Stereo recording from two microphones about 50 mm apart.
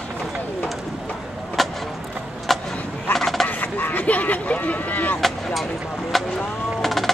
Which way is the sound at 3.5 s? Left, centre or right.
Left.